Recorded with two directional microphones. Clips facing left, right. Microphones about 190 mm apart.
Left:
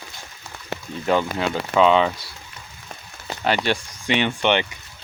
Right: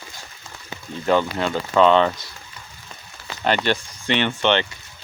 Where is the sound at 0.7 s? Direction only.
70° left (ahead or behind).